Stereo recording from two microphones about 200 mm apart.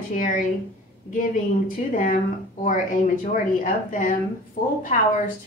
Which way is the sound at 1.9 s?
45° left (ahead or behind).